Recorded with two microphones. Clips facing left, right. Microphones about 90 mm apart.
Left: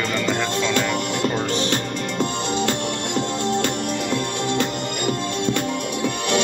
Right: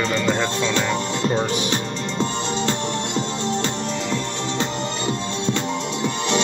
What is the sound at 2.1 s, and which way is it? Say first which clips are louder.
Music: left 1 dB; 25° right (ahead or behind).